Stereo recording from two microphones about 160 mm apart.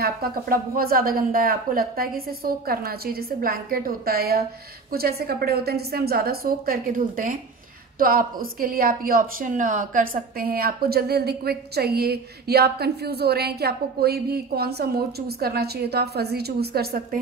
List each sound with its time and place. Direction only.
0.0 s a woman's voice: 65° right (ahead or behind)